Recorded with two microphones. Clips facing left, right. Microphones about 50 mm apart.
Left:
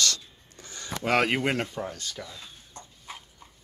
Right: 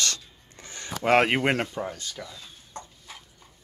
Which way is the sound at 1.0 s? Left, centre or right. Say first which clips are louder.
Right 4 dB; right.